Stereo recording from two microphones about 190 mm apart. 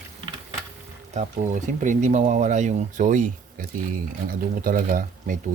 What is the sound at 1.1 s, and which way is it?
Speech, 40° right (ahead or behind).